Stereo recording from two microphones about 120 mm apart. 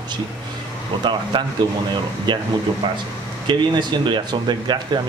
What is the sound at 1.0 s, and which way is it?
A man's voice, 40° right (ahead or behind).